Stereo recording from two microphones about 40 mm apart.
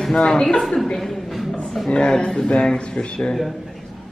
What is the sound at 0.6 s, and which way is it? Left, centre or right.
Speech, centre.